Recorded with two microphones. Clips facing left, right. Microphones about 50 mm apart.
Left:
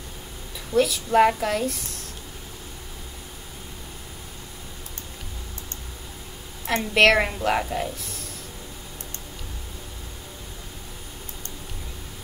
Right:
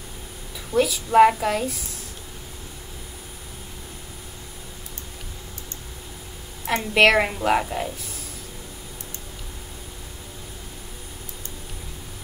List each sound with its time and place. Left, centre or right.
0.7 s a woman's voice: centre
6.6 s a woman's voice: centre